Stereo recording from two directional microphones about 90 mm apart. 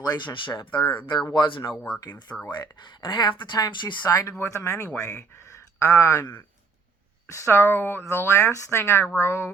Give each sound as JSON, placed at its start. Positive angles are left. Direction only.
{"t": 0.0, "sound": "speech", "side_deg": 50}
{"t": 2.0, "sound": "speech", "side_deg": 50}
{"t": 4.1, "sound": "speech", "side_deg": 40}
{"t": 5.4, "sound": "a sound", "side_deg": 30}
{"t": 7.3, "sound": "speech", "side_deg": 30}